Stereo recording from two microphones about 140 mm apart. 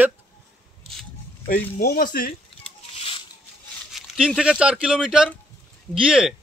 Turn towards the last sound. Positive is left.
turn(degrees=-5)  # may be behind; listen again after turning